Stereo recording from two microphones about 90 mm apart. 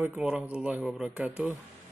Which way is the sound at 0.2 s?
10° right (ahead or behind).